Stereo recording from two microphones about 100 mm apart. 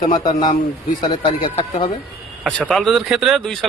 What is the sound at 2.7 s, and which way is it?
Speech, centre (ahead or behind).